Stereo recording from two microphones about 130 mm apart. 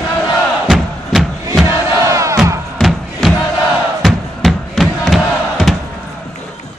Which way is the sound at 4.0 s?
Centre (ahead or behind).